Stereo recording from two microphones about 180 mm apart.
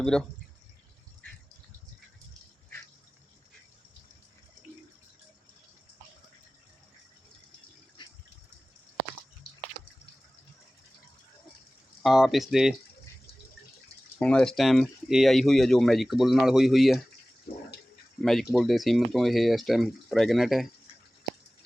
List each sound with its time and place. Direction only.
0.0 s speech: 5° left (ahead or behind)
8.0 s water: 25° left (ahead or behind)
12.0 s speech: centre (ahead or behind)
14.2 s speech: 5° left (ahead or behind)
18.2 s speech: centre (ahead or behind)